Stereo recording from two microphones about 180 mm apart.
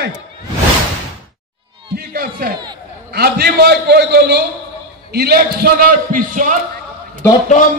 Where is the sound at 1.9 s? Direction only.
55° right (ahead or behind).